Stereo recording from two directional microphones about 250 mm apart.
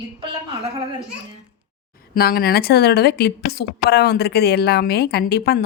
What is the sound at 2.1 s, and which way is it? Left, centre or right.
A woman's voice, left.